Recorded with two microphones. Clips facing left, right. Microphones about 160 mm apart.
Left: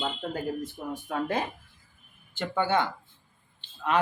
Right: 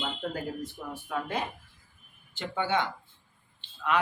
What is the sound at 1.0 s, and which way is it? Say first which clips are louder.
Speech: left 3 dB; 45° left (ahead or behind).